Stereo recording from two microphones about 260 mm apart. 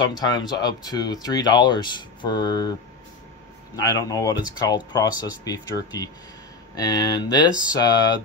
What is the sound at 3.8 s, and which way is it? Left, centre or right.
Speech, centre.